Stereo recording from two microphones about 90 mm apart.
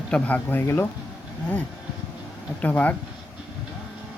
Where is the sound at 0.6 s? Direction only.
30° left (ahead or behind).